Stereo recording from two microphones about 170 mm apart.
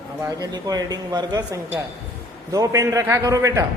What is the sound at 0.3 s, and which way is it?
Speech, 20° right (ahead or behind).